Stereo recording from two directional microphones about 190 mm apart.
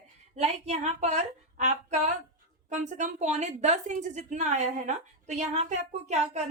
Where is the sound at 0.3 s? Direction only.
35° right (ahead or behind).